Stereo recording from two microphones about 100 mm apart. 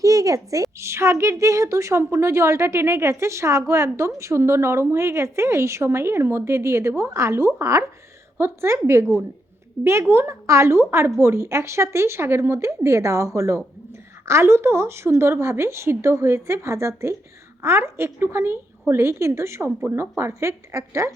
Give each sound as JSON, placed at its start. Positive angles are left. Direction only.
{"t": 0.0, "sound": "a woman's voice", "side_deg": -35}
{"t": 9.8, "sound": "a woman's voice", "side_deg": -25}